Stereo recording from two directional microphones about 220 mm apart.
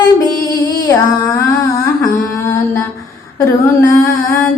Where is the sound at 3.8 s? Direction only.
15° left (ahead or behind).